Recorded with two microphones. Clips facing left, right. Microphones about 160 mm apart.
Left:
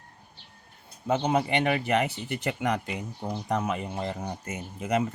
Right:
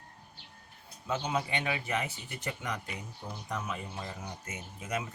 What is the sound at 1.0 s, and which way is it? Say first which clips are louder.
Speech: left 8 dB; 60° left (ahead or behind).